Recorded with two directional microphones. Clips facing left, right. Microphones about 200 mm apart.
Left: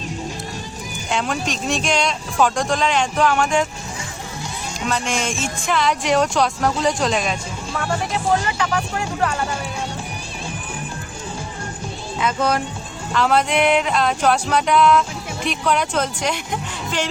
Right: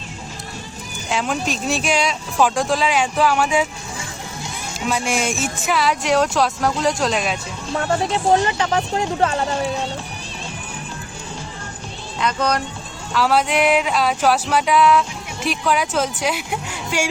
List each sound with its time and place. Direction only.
1.1 s speech: centre (ahead or behind)
4.8 s speech: 10° right (ahead or behind)
7.7 s speech: 30° right (ahead or behind)
12.2 s speech: 5° left (ahead or behind)